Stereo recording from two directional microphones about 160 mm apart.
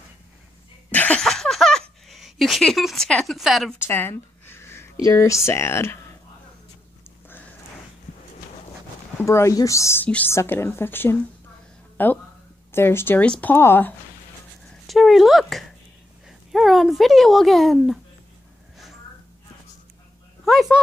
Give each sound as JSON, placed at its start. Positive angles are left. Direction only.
{"t": 0.9, "sound": "a sound", "side_deg": 10}
{"t": 3.8, "sound": "a sound", "side_deg": 15}
{"t": 5.0, "sound": "a woman's voice", "side_deg": 20}
{"t": 9.2, "sound": "a woman's voice", "side_deg": 20}
{"t": 14.9, "sound": "speech", "side_deg": 0}
{"t": 20.4, "sound": "speech", "side_deg": 0}